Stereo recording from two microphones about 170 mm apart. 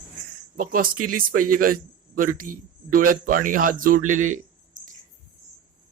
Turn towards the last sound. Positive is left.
turn(degrees=-50)  # may be behind; listen again after turning